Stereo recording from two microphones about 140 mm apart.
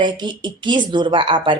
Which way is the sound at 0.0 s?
35° right (ahead or behind).